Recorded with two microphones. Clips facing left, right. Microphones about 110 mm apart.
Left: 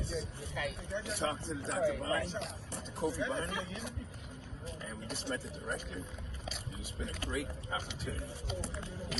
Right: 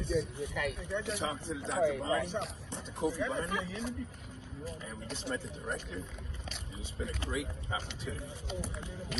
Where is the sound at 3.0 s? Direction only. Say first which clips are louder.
Right 2 dB; 5° right (ahead or behind).